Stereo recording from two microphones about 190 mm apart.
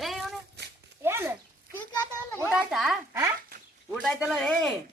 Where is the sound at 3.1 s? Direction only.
15° right (ahead or behind).